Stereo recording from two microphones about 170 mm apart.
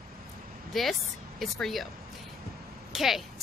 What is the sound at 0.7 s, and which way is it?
A woman's voice, centre (ahead or behind).